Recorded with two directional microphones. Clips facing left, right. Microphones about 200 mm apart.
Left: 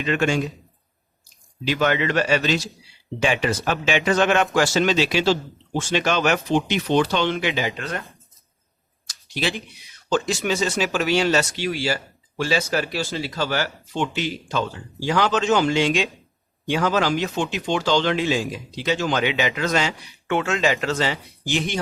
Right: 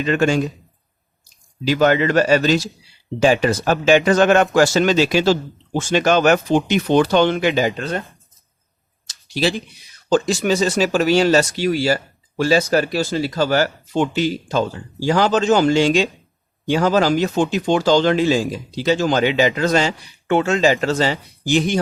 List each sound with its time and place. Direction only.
0.0 s speech: 40° right (ahead or behind)
1.6 s speech: 40° right (ahead or behind)
9.0 s a sound: 35° right (ahead or behind)
10.1 s speech: 35° right (ahead or behind)